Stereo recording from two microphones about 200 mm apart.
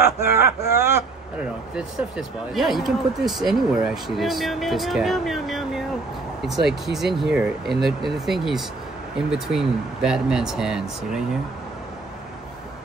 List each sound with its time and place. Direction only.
0.3 s speech: 50° left (ahead or behind)
0.8 s speech: 10° right (ahead or behind)